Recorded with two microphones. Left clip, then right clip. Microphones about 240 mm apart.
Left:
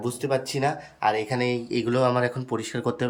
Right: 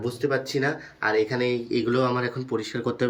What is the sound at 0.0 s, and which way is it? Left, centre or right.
Speech, centre.